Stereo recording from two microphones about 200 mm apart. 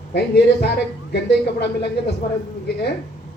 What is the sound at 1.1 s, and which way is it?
Speech, 55° left (ahead or behind).